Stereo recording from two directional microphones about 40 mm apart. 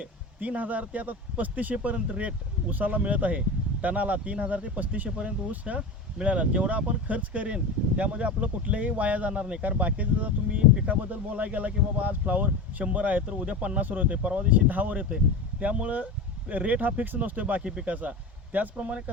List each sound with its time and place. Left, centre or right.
0.3 s speech: right
5.0 s speech: right
14.5 s speech: right
17.6 s speech: right
17.8 s speech: right